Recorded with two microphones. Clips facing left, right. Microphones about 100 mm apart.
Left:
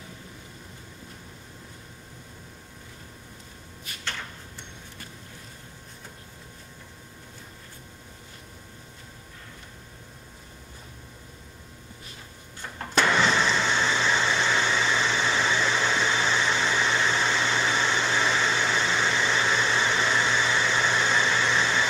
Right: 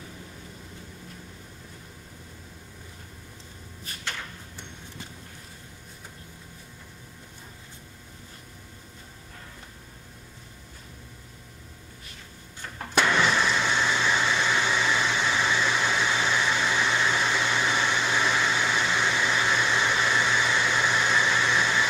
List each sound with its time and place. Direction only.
12.7 s printer: 5° right (ahead or behind)
13.8 s vehicle: 10° right (ahead or behind)
14.5 s a sound: 10° right (ahead or behind)